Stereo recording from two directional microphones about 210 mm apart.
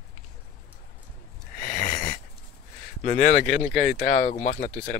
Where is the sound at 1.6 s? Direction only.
40° left (ahead or behind).